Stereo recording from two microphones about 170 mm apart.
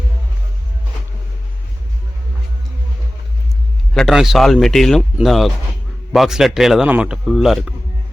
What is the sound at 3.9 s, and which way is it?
A man's voice, centre (ahead or behind).